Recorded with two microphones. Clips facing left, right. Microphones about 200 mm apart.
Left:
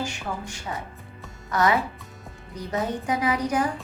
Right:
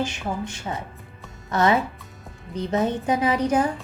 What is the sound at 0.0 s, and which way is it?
A woman's voice, 25° right (ahead or behind).